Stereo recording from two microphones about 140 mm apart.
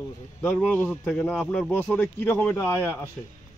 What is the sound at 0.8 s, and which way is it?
Speech, centre (ahead or behind).